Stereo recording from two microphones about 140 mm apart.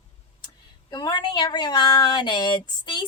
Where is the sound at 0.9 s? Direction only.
30° left (ahead or behind).